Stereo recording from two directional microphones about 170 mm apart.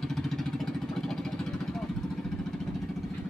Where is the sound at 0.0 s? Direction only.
Centre (ahead or behind).